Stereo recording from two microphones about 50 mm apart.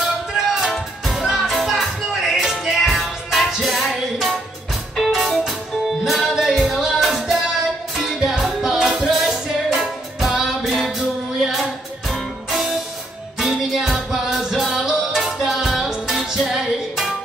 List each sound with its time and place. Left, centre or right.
0.0 s music: centre
8.2 s music: centre